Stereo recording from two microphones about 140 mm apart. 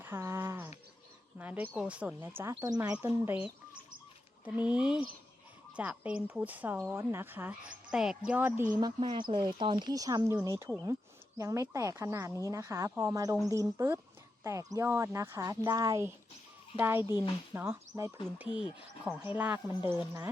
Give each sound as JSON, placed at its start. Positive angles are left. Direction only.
{"t": 0.0, "sound": "a sound", "side_deg": -15}
{"t": 1.4, "sound": "a woman's voice", "side_deg": -10}
{"t": 4.4, "sound": "a woman's voice", "side_deg": -10}
{"t": 8.8, "sound": "a woman's voice", "side_deg": -35}
{"t": 18.3, "sound": "a woman's voice", "side_deg": -10}